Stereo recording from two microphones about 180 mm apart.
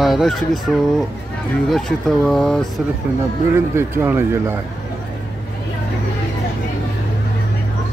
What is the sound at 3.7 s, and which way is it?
Speech, 15° right (ahead or behind).